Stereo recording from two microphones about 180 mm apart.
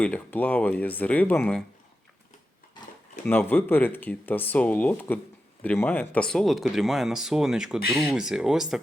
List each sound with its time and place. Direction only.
0.0 s speech: 10° left (ahead or behind)
3.2 s speech: 10° left (ahead or behind)